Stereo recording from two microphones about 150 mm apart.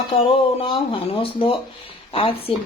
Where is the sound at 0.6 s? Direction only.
35° left (ahead or behind).